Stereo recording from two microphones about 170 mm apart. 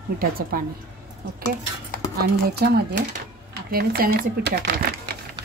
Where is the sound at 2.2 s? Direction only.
60° right (ahead or behind); by 4.6 s 80° right.